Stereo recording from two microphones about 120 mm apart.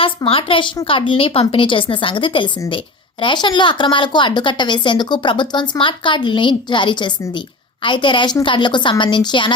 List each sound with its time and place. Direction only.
0.3 s a woman's voice: 50° left (ahead or behind)